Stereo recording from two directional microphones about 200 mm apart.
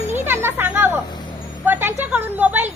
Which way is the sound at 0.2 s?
10° right (ahead or behind).